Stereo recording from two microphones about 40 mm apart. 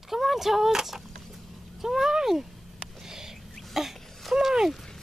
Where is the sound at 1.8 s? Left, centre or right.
Centre.